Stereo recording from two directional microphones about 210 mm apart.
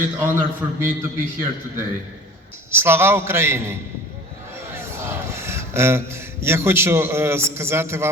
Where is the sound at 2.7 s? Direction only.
10° right (ahead or behind).